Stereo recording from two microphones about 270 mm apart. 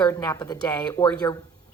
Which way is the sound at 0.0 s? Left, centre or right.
Centre.